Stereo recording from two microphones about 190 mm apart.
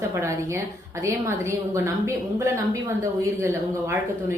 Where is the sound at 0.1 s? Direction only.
15° right (ahead or behind).